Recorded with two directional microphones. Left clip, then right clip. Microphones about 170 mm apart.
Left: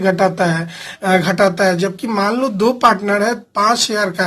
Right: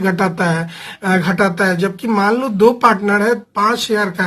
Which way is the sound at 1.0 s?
25° left (ahead or behind).